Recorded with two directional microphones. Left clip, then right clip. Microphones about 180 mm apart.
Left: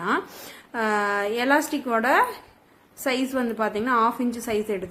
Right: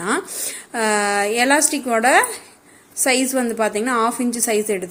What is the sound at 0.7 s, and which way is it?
A woman's voice, 20° right (ahead or behind).